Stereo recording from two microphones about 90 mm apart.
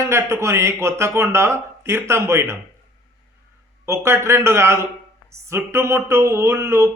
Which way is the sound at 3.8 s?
30° right (ahead or behind).